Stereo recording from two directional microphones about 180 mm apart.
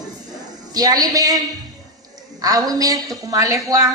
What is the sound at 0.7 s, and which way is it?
Speech, 20° right (ahead or behind).